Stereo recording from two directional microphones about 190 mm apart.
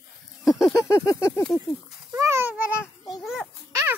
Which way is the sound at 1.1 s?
15° left (ahead or behind).